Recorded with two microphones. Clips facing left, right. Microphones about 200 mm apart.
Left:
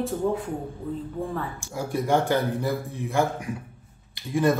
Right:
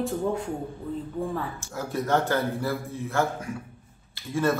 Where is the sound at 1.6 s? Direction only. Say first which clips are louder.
Left 2 dB; 15° left (ahead or behind).